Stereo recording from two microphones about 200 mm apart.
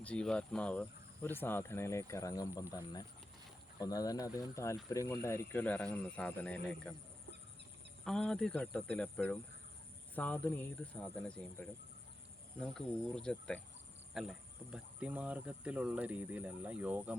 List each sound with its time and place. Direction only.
0.0 s speech: 5° left (ahead or behind)
8.0 s speech: 5° left (ahead or behind)